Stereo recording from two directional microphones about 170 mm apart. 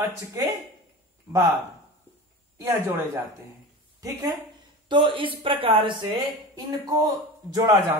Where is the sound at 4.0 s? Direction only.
20° right (ahead or behind).